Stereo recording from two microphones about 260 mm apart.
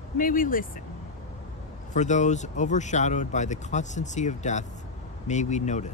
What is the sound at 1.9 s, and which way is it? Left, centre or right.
Speech, left.